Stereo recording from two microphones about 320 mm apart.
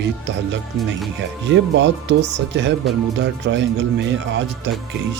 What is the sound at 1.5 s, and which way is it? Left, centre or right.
Speech, right.